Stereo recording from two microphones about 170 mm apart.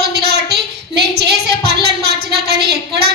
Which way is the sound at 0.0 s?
70° right (ahead or behind).